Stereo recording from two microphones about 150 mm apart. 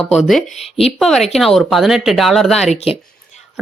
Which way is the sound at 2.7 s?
40° left (ahead or behind).